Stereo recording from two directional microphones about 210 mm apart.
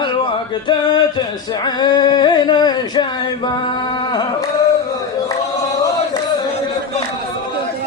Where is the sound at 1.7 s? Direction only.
20° left (ahead or behind).